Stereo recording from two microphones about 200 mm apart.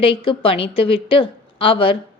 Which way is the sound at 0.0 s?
25° left (ahead or behind).